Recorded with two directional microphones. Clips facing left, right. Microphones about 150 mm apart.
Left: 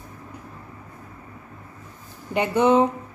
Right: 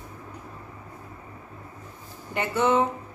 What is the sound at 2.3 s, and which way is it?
Speech, 15° left (ahead or behind).